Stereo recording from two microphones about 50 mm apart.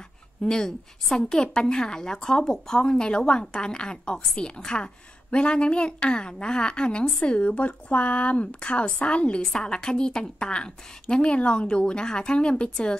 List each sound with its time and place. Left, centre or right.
0.5 s a woman's voice: centre